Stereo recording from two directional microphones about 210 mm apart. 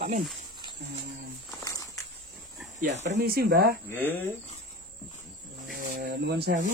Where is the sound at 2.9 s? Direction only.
35° right (ahead or behind).